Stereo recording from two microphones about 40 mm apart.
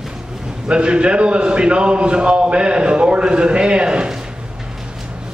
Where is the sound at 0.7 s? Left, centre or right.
Right.